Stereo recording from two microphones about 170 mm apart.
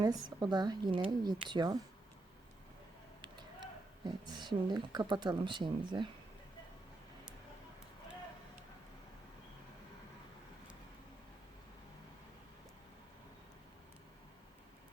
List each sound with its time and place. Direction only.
0.0 s speech: 20° right (ahead or behind)
4.0 s speech: 25° right (ahead or behind)